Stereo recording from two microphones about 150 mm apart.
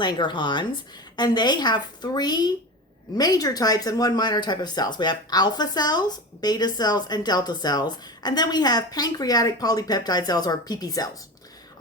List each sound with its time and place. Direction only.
0.0 s speech: 30° left (ahead or behind)